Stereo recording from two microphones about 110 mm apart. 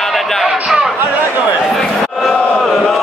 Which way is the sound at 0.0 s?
Centre (ahead or behind).